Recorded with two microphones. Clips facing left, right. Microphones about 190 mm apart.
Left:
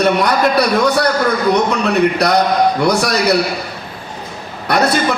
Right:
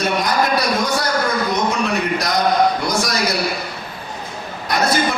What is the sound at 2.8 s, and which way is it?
Speech, 65° left (ahead or behind).